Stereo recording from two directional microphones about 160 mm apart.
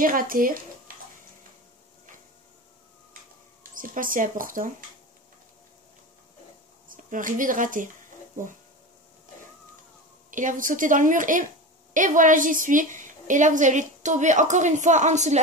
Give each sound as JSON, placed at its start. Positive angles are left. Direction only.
{"t": 0.0, "sound": "speech", "side_deg": -60}
{"t": 3.7, "sound": "speech", "side_deg": -55}
{"t": 6.9, "sound": "a woman's voice", "side_deg": -55}
{"t": 10.3, "sound": "a woman's voice", "side_deg": -55}